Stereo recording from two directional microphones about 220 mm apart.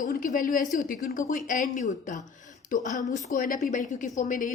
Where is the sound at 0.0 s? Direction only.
40° left (ahead or behind).